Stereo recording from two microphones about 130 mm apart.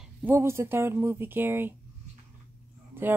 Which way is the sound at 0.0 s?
15° right (ahead or behind).